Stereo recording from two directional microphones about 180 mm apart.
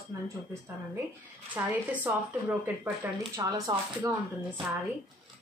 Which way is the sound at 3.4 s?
20° right (ahead or behind).